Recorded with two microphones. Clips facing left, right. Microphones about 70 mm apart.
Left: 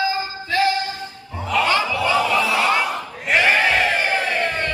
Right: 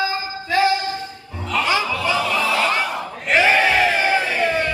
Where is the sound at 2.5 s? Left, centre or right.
Centre.